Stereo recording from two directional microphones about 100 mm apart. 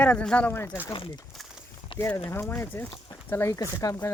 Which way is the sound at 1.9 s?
60° left (ahead or behind).